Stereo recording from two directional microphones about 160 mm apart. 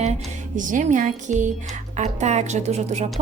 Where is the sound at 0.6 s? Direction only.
55° right (ahead or behind).